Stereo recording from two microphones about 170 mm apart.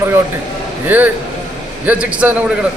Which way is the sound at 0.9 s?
10° right (ahead or behind).